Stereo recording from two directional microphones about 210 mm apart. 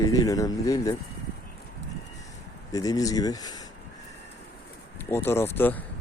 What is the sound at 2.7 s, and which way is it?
Speech, 15° left (ahead or behind).